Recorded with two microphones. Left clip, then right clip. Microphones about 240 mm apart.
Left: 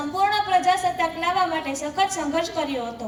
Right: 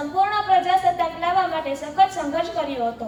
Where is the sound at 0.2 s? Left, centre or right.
Left.